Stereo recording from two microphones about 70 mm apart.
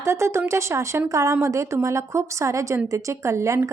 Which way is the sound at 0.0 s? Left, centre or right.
Right.